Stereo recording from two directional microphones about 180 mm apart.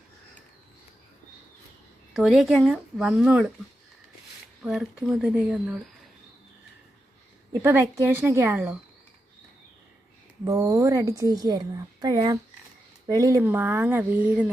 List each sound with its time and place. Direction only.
2.1 s speech: centre (ahead or behind)
4.6 s speech: centre (ahead or behind)
7.6 s speech: 15° right (ahead or behind)
10.4 s a woman's voice: 15° right (ahead or behind)